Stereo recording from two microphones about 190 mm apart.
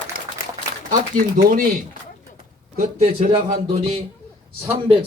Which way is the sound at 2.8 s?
40° right (ahead or behind).